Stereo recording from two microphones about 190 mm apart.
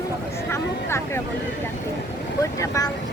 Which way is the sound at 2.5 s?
15° left (ahead or behind).